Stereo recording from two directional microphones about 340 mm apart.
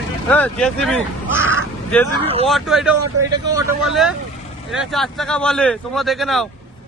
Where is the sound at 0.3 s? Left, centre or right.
Centre.